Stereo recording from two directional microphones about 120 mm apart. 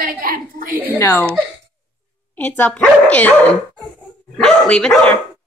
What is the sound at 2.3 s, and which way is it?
Speech, 15° left (ahead or behind).